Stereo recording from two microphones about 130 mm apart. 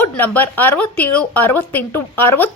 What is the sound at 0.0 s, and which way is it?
A woman's voice, 15° left (ahead or behind).